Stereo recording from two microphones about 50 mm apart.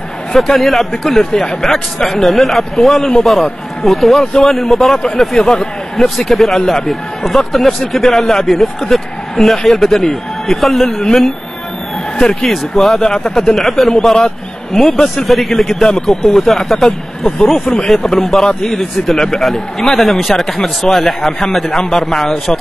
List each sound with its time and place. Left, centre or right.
0.3 s a man's voice: centre
5.4 s speech: centre
5.9 s a man's voice: centre
12.4 s a man's voice: centre
13.0 s speech: centre
13.6 s a man's voice: centre